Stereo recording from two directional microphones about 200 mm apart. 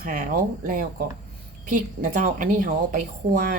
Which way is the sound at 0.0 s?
45° right (ahead or behind).